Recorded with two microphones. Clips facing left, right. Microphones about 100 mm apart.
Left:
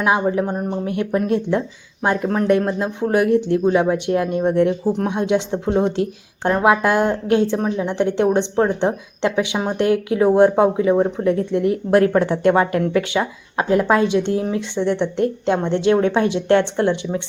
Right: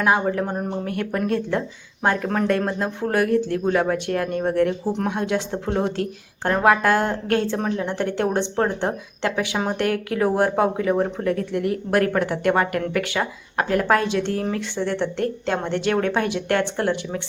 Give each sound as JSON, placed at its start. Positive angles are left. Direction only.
{"t": 0.0, "sound": "speech", "side_deg": 15}